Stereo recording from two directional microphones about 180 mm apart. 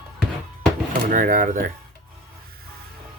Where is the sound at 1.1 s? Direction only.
50° right (ahead or behind).